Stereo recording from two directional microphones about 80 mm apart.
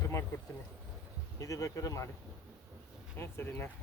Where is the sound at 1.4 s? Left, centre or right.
Left.